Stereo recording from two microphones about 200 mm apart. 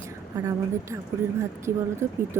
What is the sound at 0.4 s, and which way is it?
Speech, 20° right (ahead or behind).